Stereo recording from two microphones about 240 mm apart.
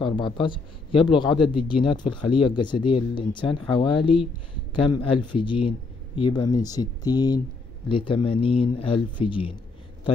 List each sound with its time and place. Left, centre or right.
0.0 s speech: centre